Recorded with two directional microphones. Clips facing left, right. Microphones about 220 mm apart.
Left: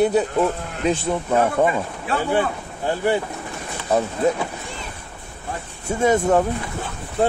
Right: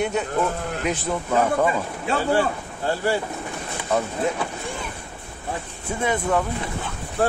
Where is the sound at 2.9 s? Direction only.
15° left (ahead or behind).